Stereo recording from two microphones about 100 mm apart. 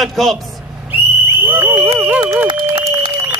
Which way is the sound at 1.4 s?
20° right (ahead or behind).